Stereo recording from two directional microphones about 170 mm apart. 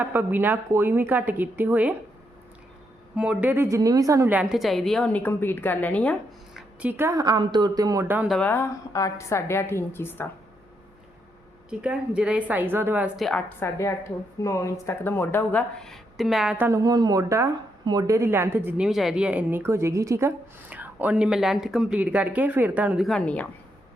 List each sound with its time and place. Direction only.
0.0 s speech: 10° right (ahead or behind)
3.2 s speech: 5° right (ahead or behind)
4.4 s a woman's voice: centre (ahead or behind)
6.9 s speech: 15° right (ahead or behind)
8.3 s a woman's voice: 10° left (ahead or behind)
11.7 s speech: 5° right (ahead or behind)
13.1 s a woman's voice: centre (ahead or behind)
13.6 s a woman's voice: 15° left (ahead or behind)